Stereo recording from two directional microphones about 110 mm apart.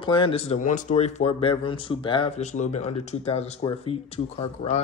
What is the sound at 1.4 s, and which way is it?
Speech, 50° left (ahead or behind).